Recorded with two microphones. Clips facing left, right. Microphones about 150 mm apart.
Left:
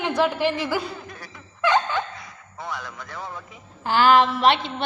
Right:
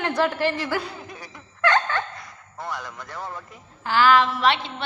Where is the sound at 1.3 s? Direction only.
5° left (ahead or behind).